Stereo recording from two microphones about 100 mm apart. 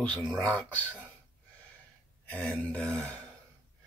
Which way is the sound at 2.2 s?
15° left (ahead or behind).